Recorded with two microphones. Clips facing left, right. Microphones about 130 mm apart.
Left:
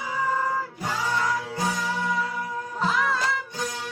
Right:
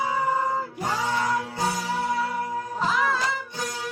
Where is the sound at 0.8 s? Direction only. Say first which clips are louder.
Right 1 dB; 20° right (ahead or behind).